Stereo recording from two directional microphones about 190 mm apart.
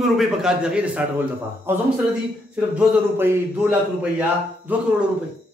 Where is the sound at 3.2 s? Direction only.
10° right (ahead or behind).